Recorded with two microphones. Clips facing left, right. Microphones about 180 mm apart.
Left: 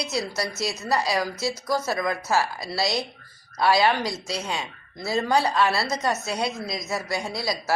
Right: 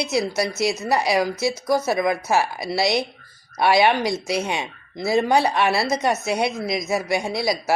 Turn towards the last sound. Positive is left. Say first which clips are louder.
# right 5 dB
turn(degrees=-20)  # may be behind; listen again after turning